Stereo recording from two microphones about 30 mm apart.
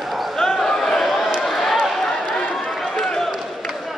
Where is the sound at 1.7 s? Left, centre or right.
Centre.